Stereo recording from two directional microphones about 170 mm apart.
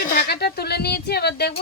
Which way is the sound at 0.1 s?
70° left (ahead or behind).